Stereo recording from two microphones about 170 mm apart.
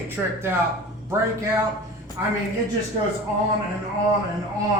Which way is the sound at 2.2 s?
15° right (ahead or behind).